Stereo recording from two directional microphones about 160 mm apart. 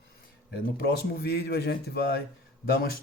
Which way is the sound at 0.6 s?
75° left (ahead or behind).